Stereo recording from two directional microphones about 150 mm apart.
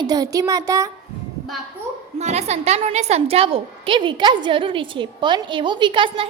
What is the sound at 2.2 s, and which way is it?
A woman's voice, 45° right (ahead or behind).